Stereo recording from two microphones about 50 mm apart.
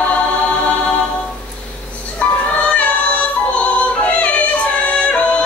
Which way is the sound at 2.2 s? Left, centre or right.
Left.